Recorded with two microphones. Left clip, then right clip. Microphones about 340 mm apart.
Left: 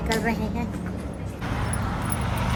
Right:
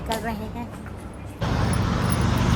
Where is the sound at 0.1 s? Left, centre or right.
Centre.